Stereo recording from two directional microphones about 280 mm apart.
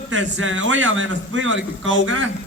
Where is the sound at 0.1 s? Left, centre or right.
Right.